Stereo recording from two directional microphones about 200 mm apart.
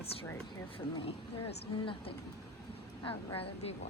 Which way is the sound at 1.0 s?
25° left (ahead or behind).